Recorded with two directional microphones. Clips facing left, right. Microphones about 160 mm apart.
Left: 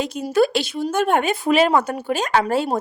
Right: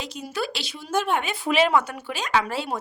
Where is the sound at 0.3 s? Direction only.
50° left (ahead or behind).